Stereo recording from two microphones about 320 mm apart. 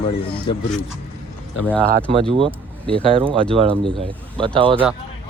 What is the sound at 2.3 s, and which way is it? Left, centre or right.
Speech, centre.